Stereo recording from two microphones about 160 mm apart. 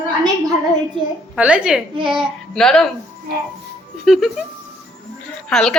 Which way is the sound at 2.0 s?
30° right (ahead or behind).